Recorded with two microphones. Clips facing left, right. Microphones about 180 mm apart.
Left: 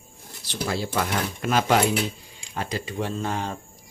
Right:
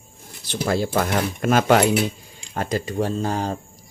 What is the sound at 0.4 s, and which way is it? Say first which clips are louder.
Speech: right 6 dB; 55° right (ahead or behind).